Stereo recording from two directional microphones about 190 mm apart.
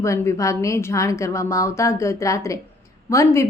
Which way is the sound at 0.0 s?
15° left (ahead or behind).